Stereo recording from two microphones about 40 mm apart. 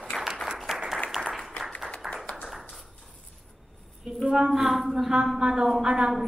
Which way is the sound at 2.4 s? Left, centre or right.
Centre.